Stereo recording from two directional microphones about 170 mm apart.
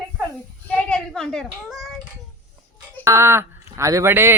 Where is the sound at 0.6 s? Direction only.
5° left (ahead or behind).